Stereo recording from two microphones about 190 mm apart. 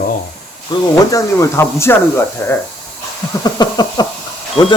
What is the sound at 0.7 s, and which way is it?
Speech, 20° left (ahead or behind).